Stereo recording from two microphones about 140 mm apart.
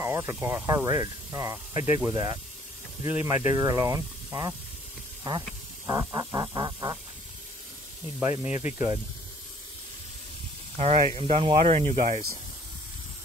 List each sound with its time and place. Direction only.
0.0 s speech: 20° right (ahead or behind)
3.3 s speech: 25° right (ahead or behind)
5.9 s speech: 25° right (ahead or behind)
8.2 s speech: 20° right (ahead or behind)
10.8 s speech: 45° right (ahead or behind)